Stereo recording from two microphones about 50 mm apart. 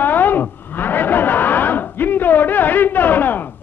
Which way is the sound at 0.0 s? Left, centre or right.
Left.